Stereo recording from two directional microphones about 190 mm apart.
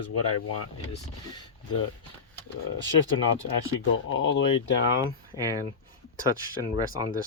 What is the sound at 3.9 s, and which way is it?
Speech, 90° left.